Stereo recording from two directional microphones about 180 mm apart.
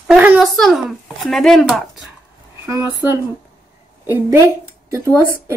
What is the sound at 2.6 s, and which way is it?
Speech, 15° right (ahead or behind).